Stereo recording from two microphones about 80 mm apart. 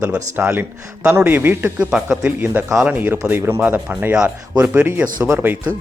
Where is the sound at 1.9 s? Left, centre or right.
Centre.